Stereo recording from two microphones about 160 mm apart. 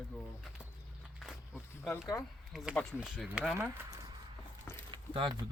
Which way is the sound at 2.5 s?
Centre (ahead or behind).